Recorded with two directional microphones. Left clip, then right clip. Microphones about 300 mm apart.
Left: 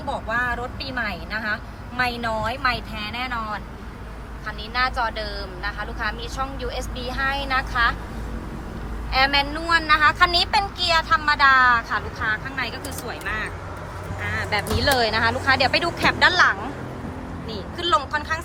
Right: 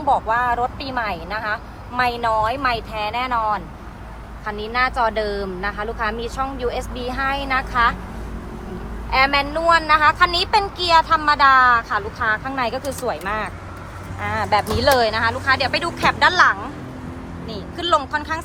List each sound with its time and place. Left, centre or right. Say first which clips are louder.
0.1 s speech: right 7 dB; centre
9.1 s speech: right 3 dB; centre